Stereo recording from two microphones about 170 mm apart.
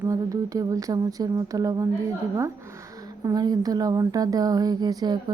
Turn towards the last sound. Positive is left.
turn(degrees=-25)  # may be behind; listen again after turning